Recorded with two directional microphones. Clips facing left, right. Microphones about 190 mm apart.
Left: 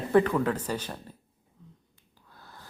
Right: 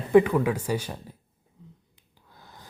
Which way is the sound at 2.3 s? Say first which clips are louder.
Right 1 dB; 15° right (ahead or behind).